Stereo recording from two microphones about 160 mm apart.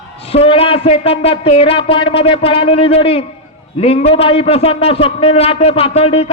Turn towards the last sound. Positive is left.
turn(degrees=40)  # may be behind; listen again after turning